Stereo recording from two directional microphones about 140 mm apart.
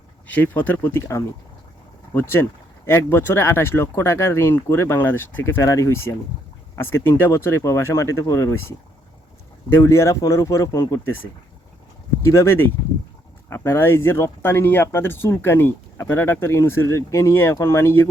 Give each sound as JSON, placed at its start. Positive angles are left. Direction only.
{"t": 0.3, "sound": "speech", "side_deg": 10}
{"t": 9.7, "sound": "speech", "side_deg": 20}